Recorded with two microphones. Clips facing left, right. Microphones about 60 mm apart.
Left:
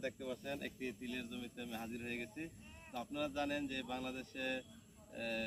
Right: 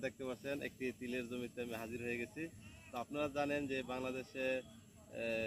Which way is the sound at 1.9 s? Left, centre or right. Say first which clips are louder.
Right 2 dB; right.